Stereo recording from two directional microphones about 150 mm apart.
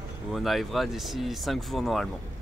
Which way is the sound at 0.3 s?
Centre (ahead or behind).